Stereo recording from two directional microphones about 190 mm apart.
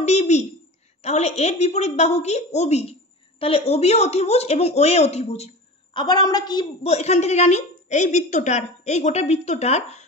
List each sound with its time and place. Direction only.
0.0 s a woman's voice: 35° left (ahead or behind)
5.9 s a woman's voice: 20° left (ahead or behind)